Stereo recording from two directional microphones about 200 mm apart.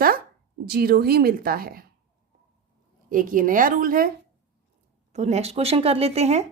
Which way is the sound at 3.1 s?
45° right (ahead or behind).